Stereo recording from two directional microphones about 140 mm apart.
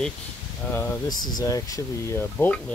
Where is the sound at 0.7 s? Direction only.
15° left (ahead or behind).